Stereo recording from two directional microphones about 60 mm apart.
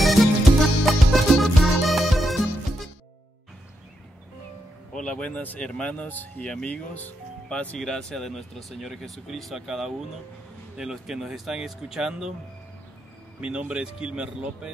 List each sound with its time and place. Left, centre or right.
0.0 s music: centre
4.9 s speech: centre
6.4 s speech: centre
7.8 s speech: centre
13.4 s speech: centre